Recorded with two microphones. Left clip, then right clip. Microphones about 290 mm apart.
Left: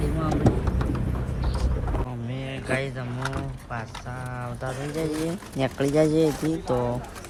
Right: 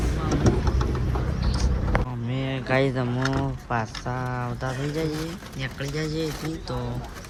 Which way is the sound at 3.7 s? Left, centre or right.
Centre.